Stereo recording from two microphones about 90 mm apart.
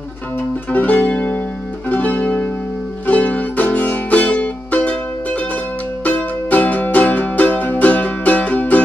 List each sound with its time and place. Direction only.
0.4 s music: 15° left (ahead or behind)